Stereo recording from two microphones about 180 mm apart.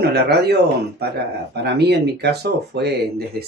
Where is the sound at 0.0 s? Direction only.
65° right (ahead or behind).